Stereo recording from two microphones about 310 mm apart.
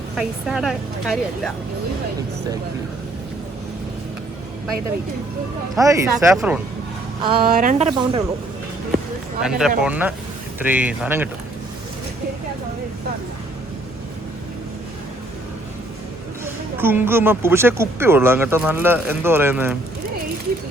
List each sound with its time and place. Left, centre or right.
0.2 s a woman's voice: centre
5.7 s speech: centre
7.2 s speech: centre
9.4 s a woman's voice: centre
16.7 s speech: centre